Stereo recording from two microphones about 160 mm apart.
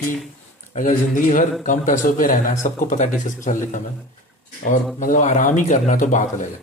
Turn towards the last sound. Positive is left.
turn(degrees=55)  # may be behind; listen again after turning